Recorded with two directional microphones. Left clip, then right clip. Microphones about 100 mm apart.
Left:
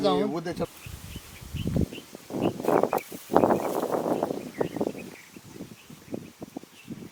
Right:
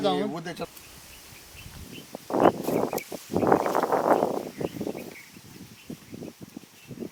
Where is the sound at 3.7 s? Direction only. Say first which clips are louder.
Right 5 dB; 45° right (ahead or behind).